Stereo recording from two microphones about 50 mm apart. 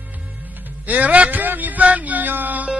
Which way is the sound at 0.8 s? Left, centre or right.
Right.